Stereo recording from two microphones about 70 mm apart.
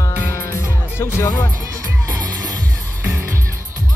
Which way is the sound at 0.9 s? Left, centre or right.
Left.